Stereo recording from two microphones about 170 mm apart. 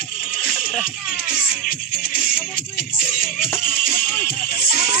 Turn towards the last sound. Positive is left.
turn(degrees=60)  # may be behind; listen again after turning